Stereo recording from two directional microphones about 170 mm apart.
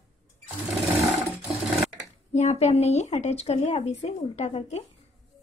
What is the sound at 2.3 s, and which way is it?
Speech, 40° left (ahead or behind).